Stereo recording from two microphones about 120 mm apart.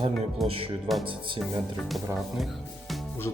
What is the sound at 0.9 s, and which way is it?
Speech, centre (ahead or behind).